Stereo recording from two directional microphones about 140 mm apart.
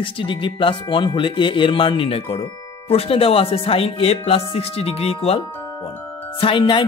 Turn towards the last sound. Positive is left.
turn(degrees=35)  # may be behind; listen again after turning